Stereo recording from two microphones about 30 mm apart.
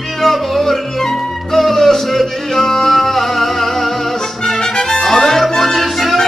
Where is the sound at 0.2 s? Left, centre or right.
Centre.